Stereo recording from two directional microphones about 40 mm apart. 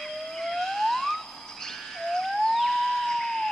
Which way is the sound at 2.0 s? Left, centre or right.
Centre.